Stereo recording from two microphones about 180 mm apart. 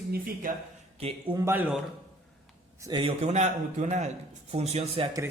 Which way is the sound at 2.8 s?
30° right (ahead or behind).